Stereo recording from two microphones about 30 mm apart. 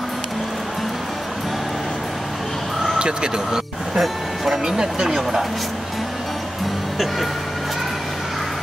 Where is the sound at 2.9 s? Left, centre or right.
Right.